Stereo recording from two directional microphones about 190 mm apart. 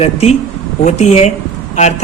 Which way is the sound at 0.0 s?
35° left (ahead or behind).